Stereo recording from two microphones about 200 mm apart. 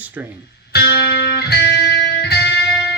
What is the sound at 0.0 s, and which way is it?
Speech, 10° right (ahead or behind).